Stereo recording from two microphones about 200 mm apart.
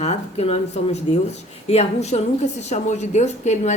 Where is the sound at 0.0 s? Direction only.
30° left (ahead or behind).